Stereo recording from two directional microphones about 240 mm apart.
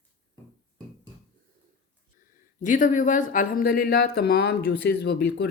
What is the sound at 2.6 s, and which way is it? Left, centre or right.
Speech, left.